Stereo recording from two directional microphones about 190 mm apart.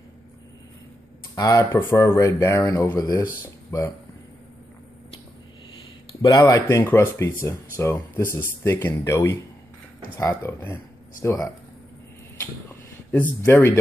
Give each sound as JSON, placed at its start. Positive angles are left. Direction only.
{"t": 1.3, "sound": "speech", "side_deg": 20}
{"t": 6.2, "sound": "speech", "side_deg": 15}
{"t": 13.1, "sound": "speech", "side_deg": 10}